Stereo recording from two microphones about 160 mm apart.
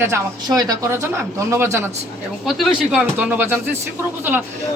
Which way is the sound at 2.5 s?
Centre (ahead or behind).